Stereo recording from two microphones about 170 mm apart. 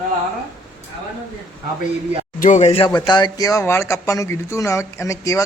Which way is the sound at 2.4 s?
45° left (ahead or behind).